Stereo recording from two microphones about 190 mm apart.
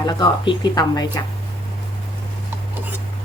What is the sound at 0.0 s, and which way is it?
A woman's voice, 20° left (ahead or behind).